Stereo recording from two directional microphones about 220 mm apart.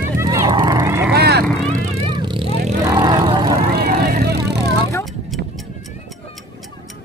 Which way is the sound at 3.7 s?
45° right (ahead or behind).